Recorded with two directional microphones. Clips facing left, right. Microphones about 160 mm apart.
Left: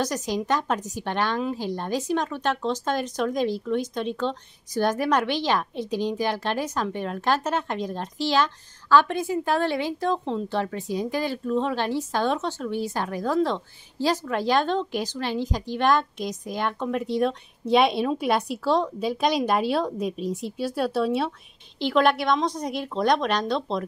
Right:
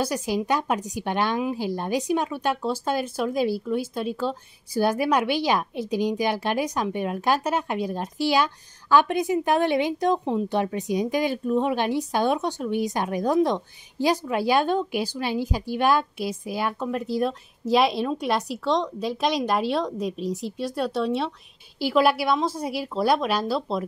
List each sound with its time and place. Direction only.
0.0 s a woman's voice: 10° right (ahead or behind)